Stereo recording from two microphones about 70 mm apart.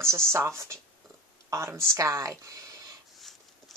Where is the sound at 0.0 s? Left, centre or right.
Right.